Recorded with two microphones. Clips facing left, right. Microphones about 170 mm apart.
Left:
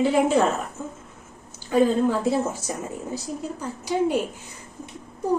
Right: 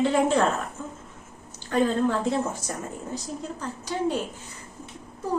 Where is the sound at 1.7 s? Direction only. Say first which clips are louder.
Left 3 dB; 10° left (ahead or behind).